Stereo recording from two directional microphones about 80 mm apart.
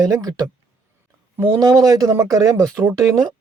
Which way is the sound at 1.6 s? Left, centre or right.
Right.